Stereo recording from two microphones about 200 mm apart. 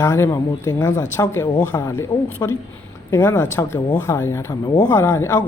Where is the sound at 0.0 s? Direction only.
15° left (ahead or behind).